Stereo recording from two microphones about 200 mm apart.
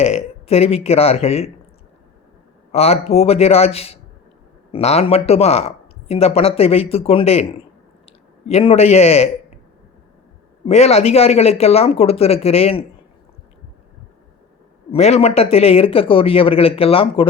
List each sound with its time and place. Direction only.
0.0 s speech: 30° left (ahead or behind)
2.7 s speech: 30° left (ahead or behind)
10.7 s speech: 35° left (ahead or behind)
14.9 s speech: 30° left (ahead or behind)